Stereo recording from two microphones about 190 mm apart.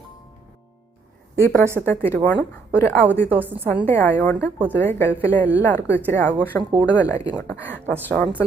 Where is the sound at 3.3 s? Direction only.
10° right (ahead or behind).